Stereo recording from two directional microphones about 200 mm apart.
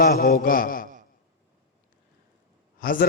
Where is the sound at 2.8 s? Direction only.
45° left (ahead or behind).